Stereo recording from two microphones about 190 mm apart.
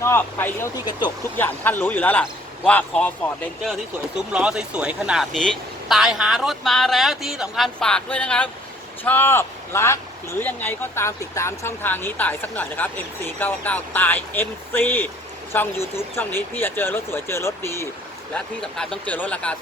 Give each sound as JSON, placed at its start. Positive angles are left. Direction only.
{"t": 0.0, "sound": "speech", "side_deg": 10}
{"t": 0.9, "sound": "speech", "side_deg": 25}
{"t": 1.4, "sound": "speech", "side_deg": 10}
{"t": 18.3, "sound": "speech", "side_deg": 5}